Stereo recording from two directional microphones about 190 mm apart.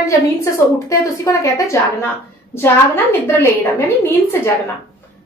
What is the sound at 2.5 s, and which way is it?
A woman's voice, 10° left (ahead or behind).